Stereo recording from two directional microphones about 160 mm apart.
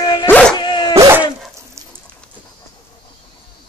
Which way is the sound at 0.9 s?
15° right (ahead or behind).